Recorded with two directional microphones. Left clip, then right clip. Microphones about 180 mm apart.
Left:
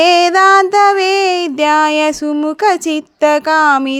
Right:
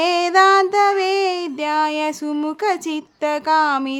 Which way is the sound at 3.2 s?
35° left (ahead or behind).